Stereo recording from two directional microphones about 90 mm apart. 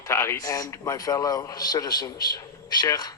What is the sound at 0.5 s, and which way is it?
A man's voice, 40° left (ahead or behind).